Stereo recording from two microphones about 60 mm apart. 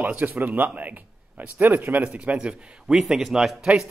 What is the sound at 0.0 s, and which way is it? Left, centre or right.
A man's voice, right.